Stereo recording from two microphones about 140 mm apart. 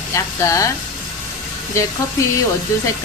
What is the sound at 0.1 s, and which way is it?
Speech, 20° left (ahead or behind).